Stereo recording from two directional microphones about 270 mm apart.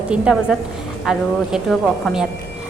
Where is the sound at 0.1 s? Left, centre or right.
Centre.